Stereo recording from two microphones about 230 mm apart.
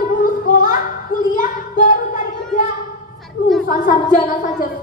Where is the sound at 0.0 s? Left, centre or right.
Left.